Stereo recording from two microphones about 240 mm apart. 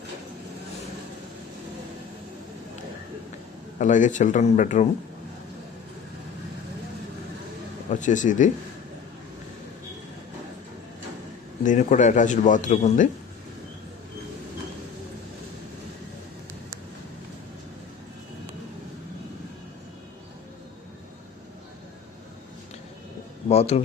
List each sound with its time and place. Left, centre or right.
3.8 s a man's voice: left
7.9 s a man's voice: left
11.6 s a man's voice: left
23.5 s a man's voice: left